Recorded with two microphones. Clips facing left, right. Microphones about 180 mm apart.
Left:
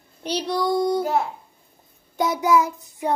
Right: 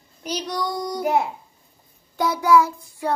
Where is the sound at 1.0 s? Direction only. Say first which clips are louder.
Right 1 dB; 15° right (ahead or behind).